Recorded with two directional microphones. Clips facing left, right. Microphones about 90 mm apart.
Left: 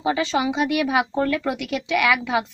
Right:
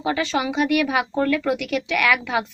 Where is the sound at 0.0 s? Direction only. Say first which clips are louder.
Left 1 dB; 25° left (ahead or behind).